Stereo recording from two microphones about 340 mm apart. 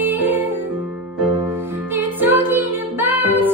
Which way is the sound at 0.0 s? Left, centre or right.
Centre.